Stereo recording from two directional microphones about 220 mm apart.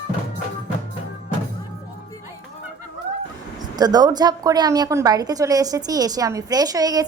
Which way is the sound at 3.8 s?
20° right (ahead or behind).